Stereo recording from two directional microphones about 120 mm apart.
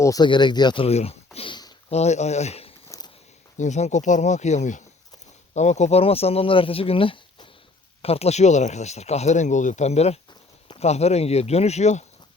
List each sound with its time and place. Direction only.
0.0 s speech: 30° left (ahead or behind)
0.3 s speech: 40° left (ahead or behind)
0.9 s speech: 60° left (ahead or behind)
1.9 s speech: 65° left (ahead or behind)
3.6 s speech: 75° left (ahead or behind); by 7.4 s 45° left (ahead or behind)
8.0 s speech: 60° left (ahead or behind)